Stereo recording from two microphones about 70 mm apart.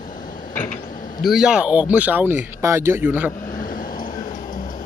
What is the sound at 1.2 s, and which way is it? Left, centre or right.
Speech, centre.